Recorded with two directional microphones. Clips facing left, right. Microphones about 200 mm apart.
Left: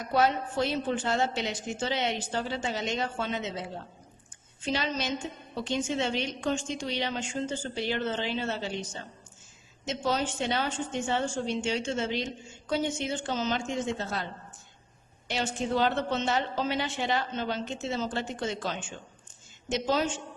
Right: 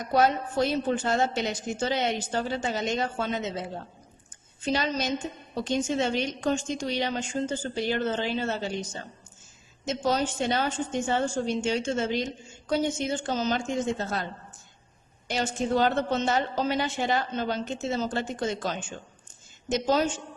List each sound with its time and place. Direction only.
0.1 s a woman's voice: 45° right (ahead or behind)
15.3 s a woman's voice: 45° right (ahead or behind)